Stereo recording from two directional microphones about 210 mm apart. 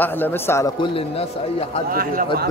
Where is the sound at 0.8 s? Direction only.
25° left (ahead or behind).